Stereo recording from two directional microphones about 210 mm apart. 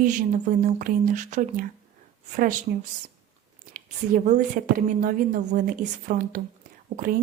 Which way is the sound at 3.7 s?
40° right (ahead or behind).